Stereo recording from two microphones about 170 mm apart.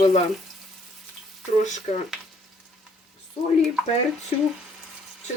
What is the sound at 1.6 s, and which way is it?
Speech, 45° left (ahead or behind).